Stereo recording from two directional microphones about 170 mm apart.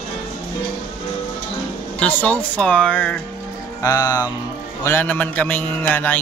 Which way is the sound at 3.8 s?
20° left (ahead or behind).